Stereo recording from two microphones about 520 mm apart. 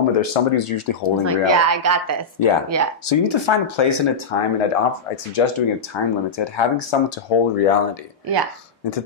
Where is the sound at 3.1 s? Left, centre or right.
Left.